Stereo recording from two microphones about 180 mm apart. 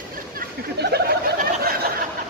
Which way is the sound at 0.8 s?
65° right (ahead or behind).